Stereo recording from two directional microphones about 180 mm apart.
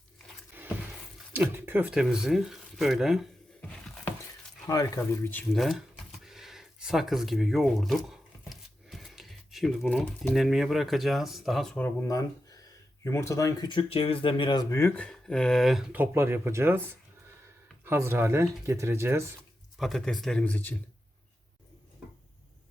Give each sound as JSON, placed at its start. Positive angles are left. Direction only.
{"t": 1.3, "sound": "speech", "side_deg": -10}
{"t": 4.6, "sound": "speech", "side_deg": 20}
{"t": 5.3, "sound": "speech", "side_deg": 5}
{"t": 19.8, "sound": "speech", "side_deg": 0}